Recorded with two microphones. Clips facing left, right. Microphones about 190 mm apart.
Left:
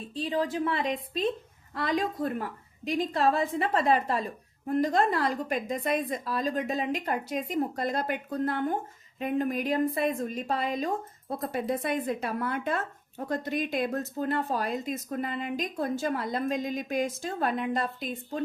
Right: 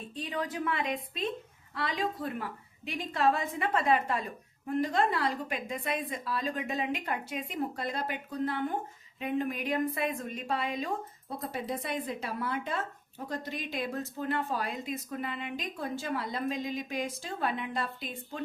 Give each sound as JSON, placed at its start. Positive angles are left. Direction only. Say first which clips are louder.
{"t": 0.1, "sound": "a woman's voice", "louder": "left 7 dB", "side_deg": 30}
{"t": 11.3, "sound": "speech", "louder": "left 5 dB", "side_deg": 50}